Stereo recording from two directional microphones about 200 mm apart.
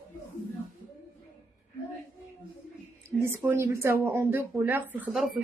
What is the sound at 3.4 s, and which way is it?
Speech, 15° right (ahead or behind).